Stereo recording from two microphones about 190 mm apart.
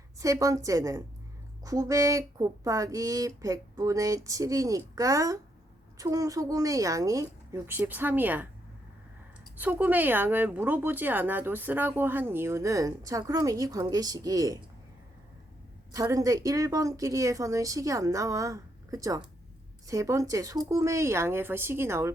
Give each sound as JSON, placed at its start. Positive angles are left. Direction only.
{"t": 0.2, "sound": "speech", "side_deg": -15}
{"t": 9.6, "sound": "speech", "side_deg": -10}
{"t": 15.9, "sound": "speech", "side_deg": -15}